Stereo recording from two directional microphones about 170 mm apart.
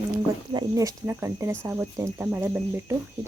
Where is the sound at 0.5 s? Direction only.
20° right (ahead or behind).